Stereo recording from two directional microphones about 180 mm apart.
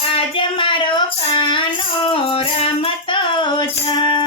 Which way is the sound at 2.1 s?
30° left (ahead or behind).